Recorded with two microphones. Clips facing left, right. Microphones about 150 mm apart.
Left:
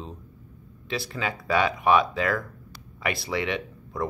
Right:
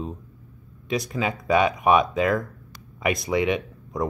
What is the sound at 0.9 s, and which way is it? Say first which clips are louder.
Speech: right 5 dB; 15° right (ahead or behind).